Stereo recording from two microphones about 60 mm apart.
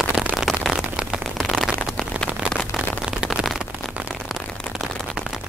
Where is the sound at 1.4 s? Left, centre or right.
Centre.